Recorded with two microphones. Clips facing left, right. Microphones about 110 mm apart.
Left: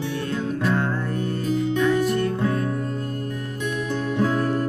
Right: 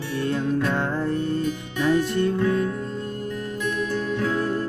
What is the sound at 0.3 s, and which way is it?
Music, 25° right (ahead or behind).